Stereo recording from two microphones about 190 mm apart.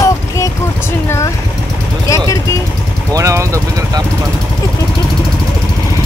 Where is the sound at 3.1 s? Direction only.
15° right (ahead or behind).